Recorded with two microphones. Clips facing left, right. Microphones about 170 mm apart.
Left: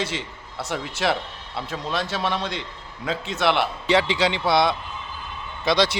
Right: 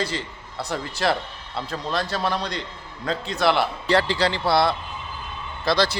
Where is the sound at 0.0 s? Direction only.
5° left (ahead or behind).